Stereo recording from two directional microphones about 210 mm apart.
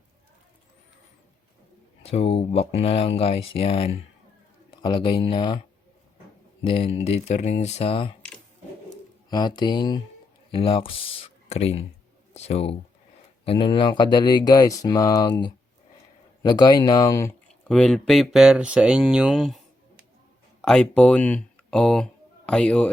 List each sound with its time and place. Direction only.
2.0 s speech: 30° left (ahead or behind)
6.7 s speech: 25° left (ahead or behind)
9.3 s speech: 20° left (ahead or behind)
17.7 s speech: centre (ahead or behind)
20.6 s speech: 5° left (ahead or behind)